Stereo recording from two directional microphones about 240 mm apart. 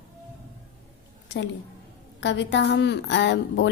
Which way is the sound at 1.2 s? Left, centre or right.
Left.